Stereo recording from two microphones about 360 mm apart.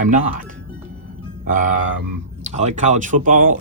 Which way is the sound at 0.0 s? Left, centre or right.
Right.